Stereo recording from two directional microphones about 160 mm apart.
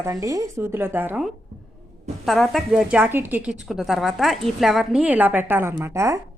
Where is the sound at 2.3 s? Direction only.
Centre (ahead or behind); by 6.2 s 20° right (ahead or behind).